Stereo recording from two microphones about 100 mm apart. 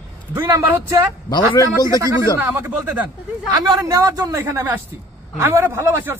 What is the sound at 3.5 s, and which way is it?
A man's voice, 40° right (ahead or behind).